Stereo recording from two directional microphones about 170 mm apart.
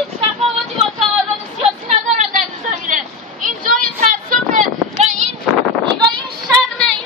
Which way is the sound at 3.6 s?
55° right (ahead or behind).